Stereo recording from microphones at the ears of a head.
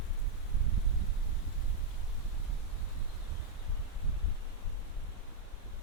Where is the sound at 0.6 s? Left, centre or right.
Right.